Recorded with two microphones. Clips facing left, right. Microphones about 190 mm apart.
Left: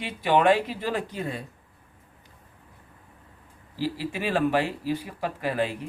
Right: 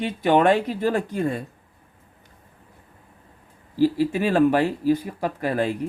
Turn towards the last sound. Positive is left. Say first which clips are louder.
# right 4 dB
turn(degrees=-45)  # may be behind; listen again after turning